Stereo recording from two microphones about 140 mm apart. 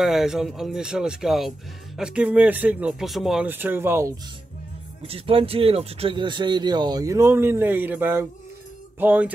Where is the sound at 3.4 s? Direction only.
15° right (ahead or behind).